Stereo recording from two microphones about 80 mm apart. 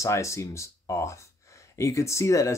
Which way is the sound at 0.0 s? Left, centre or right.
Left.